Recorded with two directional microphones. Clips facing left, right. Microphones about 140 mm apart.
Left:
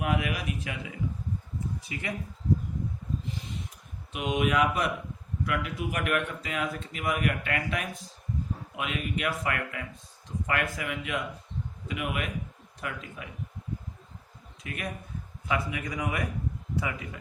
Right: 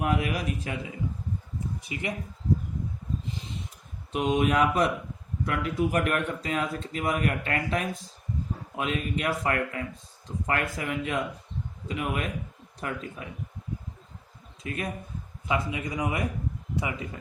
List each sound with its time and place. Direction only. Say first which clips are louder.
0.0 s a man's voice: right 2 dB; 35° right (ahead or behind)
1.8 s speech: right 3 dB; 20° right (ahead or behind)
4.1 s a man's voice: right 3 dB; 40° right (ahead or behind)
14.6 s a man's voice: right 4 dB; 30° right (ahead or behind)